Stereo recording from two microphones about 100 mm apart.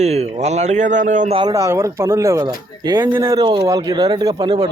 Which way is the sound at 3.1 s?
25° right (ahead or behind).